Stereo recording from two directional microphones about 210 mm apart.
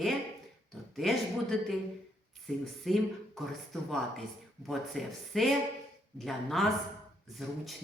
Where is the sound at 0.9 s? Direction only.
Centre (ahead or behind).